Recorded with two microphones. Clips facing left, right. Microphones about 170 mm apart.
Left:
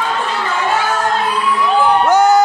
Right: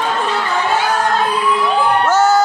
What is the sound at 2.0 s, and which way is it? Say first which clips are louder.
Music: left 2 dB; 15° left (ahead or behind).